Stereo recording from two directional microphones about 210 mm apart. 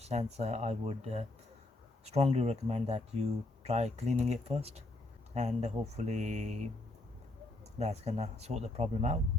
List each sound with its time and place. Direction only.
0.0 s speech: 30° right (ahead or behind)
7.8 s speech: 30° right (ahead or behind)